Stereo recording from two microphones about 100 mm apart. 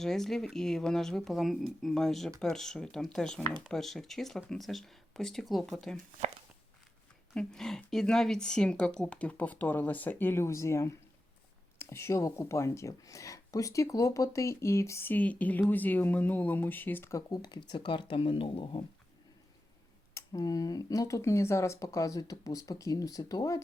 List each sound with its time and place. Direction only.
0.0 s speech: 5° left (ahead or behind)
7.3 s speech: 5° left (ahead or behind); by 18.9 s 55° left (ahead or behind)
20.1 s speech: 35° left (ahead or behind)